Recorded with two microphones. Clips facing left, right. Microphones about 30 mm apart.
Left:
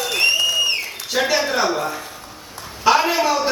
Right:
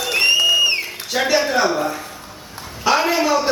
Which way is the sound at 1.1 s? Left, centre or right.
Centre.